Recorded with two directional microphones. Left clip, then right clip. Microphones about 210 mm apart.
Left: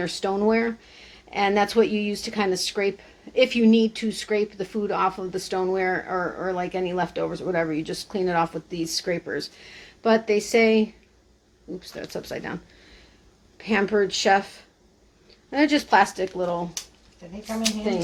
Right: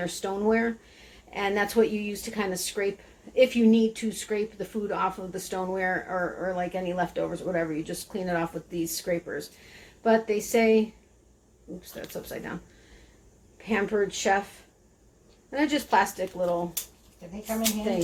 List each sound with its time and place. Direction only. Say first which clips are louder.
0.0 s speech: left 5 dB; 40° left (ahead or behind)
12.1 s speech: left 5 dB; 40° left (ahead or behind)
13.6 s speech: left 4 dB; 40° left (ahead or behind)
15.4 s speech: left 5 dB; 40° left (ahead or behind)